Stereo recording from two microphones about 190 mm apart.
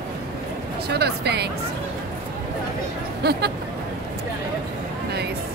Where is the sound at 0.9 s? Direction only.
60° right (ahead or behind).